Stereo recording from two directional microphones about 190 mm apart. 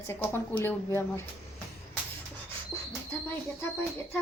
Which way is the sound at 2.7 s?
Centre (ahead or behind).